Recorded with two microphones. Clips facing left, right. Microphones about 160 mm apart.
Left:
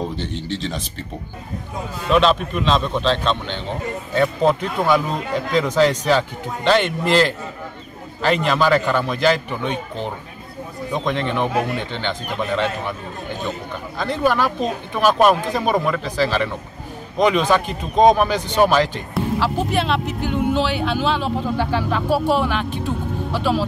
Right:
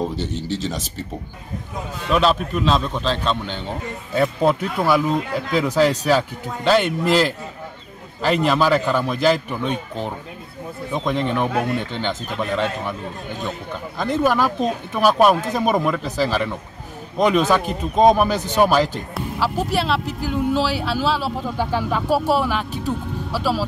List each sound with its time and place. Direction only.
0.4 s speech: 5° right (ahead or behind)
2.1 s speech: 5° right (ahead or behind)
10.9 s speech: 5° right (ahead or behind)
14.0 s speech: 10° right (ahead or behind)